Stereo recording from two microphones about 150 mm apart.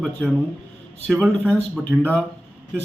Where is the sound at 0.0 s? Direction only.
Centre (ahead or behind).